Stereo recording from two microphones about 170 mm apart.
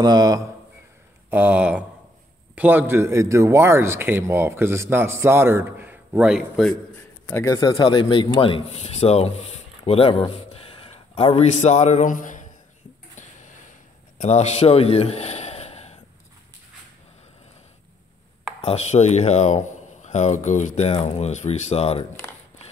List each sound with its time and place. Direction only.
0.0 s speech: 25° right (ahead or behind)
1.3 s a man's voice: 5° right (ahead or behind)
7.2 s a man's voice: 20° left (ahead or behind)
7.7 s speech: 30° left (ahead or behind); by 12.4 s 50° left (ahead or behind)
13.1 s a sound: 45° left (ahead or behind)
14.1 s a man's voice: 40° left (ahead or behind)
18.6 s speech: 40° left (ahead or behind)